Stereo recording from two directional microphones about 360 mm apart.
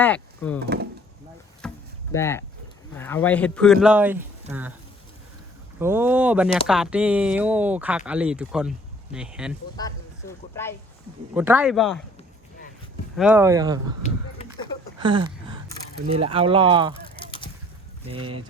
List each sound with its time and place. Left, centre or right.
0.0 s speech: centre
0.6 s wood: right
1.6 s a sound: centre
2.1 s speech: centre
5.8 s speech: centre
9.7 s speech: centre
11.3 s speech: centre
13.1 s speech: centre
14.9 s a sound: centre
16.0 s speech: centre
17.2 s a sound: centre